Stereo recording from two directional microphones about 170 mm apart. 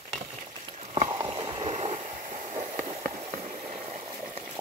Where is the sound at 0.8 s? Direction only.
35° right (ahead or behind).